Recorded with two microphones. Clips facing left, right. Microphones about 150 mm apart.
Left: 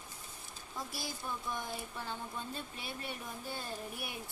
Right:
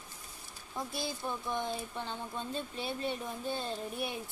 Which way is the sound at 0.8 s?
20° right (ahead or behind).